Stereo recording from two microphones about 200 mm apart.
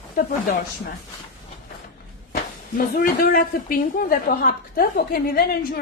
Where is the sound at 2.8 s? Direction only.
45° left (ahead or behind).